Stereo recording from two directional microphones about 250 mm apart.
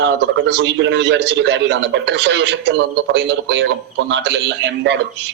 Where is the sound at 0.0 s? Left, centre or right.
Right.